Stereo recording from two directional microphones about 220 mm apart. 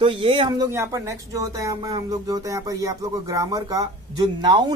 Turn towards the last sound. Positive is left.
turn(degrees=-20)  # may be behind; listen again after turning